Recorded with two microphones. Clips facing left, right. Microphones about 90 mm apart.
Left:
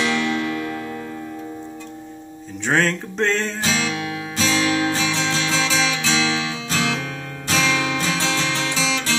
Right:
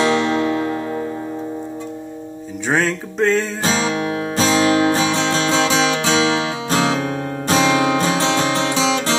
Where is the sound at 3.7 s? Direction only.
35° right (ahead or behind).